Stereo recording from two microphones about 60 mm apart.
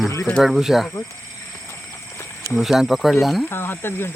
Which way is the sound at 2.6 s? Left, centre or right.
Centre.